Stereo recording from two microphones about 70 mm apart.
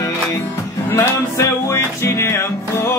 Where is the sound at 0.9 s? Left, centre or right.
Left.